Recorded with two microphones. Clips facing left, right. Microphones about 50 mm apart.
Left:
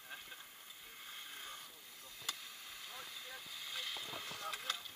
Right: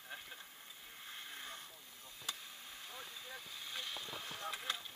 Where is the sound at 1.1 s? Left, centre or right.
Right.